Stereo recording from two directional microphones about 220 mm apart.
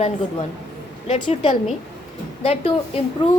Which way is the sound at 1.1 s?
20° left (ahead or behind).